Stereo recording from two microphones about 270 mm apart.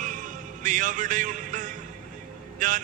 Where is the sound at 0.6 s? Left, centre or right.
Right.